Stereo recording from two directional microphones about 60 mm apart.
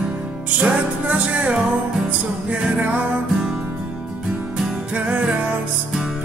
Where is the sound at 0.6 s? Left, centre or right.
Right.